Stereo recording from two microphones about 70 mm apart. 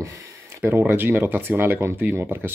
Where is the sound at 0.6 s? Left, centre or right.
Right.